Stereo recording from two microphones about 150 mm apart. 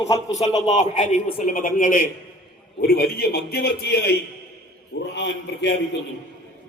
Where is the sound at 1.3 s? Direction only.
70° left (ahead or behind).